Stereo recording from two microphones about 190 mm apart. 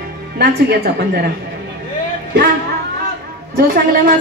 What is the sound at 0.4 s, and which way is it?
Speech, 60° right (ahead or behind).